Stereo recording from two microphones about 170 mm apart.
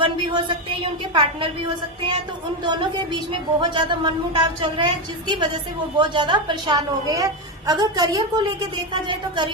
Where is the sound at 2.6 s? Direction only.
25° right (ahead or behind).